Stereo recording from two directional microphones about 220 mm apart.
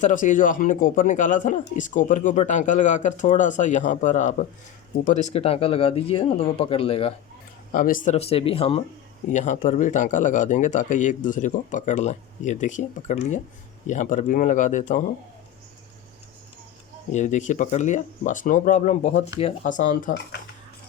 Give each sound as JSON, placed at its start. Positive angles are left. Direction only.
{"t": 0.0, "sound": "speech", "side_deg": 35}
{"t": 7.7, "sound": "speech", "side_deg": 35}
{"t": 17.1, "sound": "speech", "side_deg": 35}